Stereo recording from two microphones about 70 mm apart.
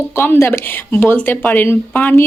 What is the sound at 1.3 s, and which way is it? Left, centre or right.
Speech, left.